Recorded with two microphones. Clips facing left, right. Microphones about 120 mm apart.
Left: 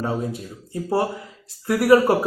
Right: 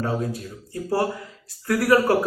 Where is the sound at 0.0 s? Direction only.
25° left (ahead or behind).